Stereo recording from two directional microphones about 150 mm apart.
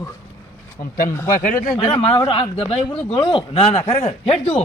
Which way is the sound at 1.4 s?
60° left (ahead or behind).